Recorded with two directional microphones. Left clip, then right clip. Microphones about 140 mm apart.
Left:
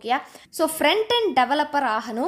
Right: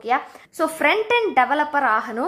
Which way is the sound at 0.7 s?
60° left (ahead or behind).